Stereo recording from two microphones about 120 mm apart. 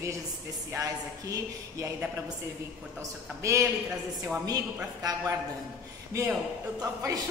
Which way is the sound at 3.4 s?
25° right (ahead or behind).